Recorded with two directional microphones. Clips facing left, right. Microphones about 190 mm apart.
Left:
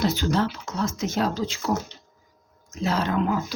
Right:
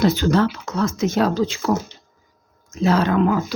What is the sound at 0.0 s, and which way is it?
Speech, 60° right (ahead or behind).